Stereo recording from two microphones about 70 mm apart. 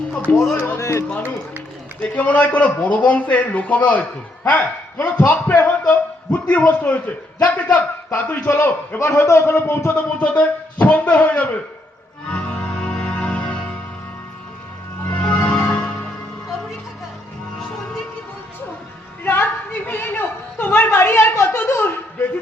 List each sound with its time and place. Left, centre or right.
0.3 s a man's voice: left
0.8 s speech: left
2.0 s a man's voice: centre
9.0 s a man's voice: left
9.9 s a man's voice: centre
12.3 s music: centre
15.0 s music: left
19.2 s a woman's voice: left